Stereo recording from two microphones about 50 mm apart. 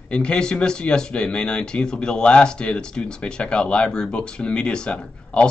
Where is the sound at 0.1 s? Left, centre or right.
Centre.